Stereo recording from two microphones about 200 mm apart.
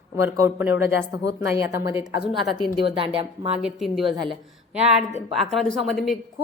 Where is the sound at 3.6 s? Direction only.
Centre (ahead or behind).